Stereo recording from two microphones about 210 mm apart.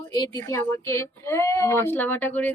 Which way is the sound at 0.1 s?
20° left (ahead or behind).